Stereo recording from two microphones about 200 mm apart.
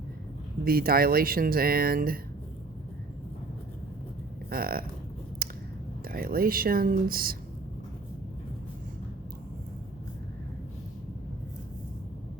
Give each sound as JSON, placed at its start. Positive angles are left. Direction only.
{"t": 0.6, "sound": "speech", "side_deg": -50}
{"t": 4.4, "sound": "speech", "side_deg": -45}
{"t": 5.4, "sound": "a sound", "side_deg": -45}
{"t": 6.1, "sound": "speech", "side_deg": -50}